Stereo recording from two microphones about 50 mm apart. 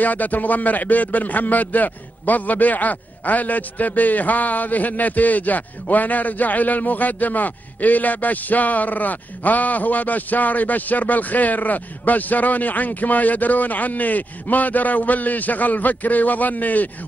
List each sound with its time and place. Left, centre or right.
0.0 s a man's voice: left